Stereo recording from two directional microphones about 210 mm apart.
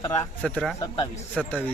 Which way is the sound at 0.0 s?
20° left (ahead or behind).